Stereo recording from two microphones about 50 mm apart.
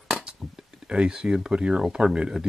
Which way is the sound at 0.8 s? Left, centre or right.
Centre.